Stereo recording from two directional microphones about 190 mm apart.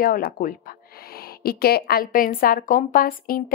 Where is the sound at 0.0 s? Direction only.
50° left (ahead or behind).